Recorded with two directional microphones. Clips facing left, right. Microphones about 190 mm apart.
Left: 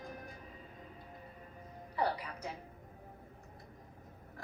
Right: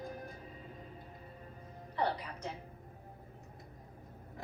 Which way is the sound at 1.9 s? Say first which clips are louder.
Even; 10° left (ahead or behind).